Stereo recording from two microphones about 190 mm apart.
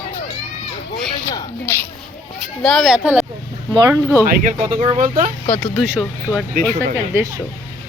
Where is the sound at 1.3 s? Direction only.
15° left (ahead or behind).